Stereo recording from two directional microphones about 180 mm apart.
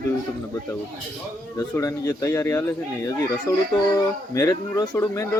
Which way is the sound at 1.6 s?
15° left (ahead or behind).